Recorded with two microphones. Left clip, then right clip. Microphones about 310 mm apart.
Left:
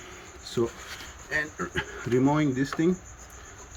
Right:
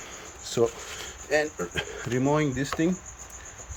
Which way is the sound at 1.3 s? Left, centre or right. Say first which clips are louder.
Right 3 dB; centre.